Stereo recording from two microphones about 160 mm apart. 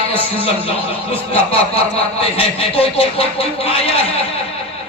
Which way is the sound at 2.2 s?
35° left (ahead or behind).